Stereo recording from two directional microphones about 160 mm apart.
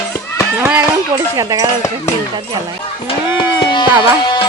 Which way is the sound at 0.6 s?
10° right (ahead or behind).